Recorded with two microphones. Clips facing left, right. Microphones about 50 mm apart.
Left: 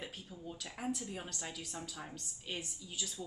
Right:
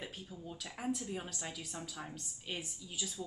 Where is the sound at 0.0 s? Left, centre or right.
Centre.